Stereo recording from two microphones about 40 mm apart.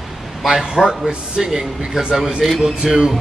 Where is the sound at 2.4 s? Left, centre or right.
Centre.